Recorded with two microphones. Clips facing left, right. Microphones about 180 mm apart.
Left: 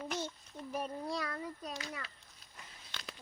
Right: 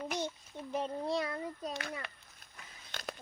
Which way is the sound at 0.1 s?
20° right (ahead or behind).